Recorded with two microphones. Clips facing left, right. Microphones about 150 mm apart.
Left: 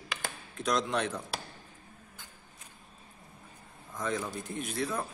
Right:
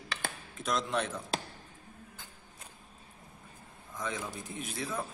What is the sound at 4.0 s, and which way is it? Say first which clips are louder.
A man's voice: left 4 dB; centre (ahead or behind).